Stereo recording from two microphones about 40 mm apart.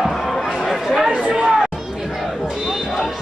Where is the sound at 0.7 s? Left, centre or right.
Centre.